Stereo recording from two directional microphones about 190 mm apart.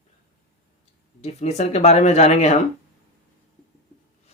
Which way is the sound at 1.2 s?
35° left (ahead or behind).